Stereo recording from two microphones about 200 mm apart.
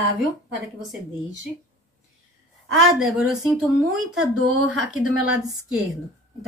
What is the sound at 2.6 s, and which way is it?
Speech, 90° right.